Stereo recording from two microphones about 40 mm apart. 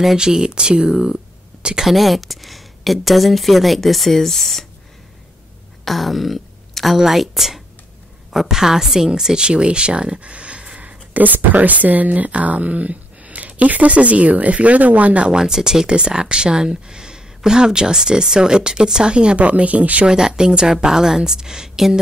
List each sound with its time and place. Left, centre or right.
0.2 s speech: centre
1.9 s speech: centre
5.9 s a woman's voice: centre; by 10.8 s right
10.8 s speech: right
15.4 s a woman's voice: centre; by 20.1 s right
20.1 s a woman's voice: centre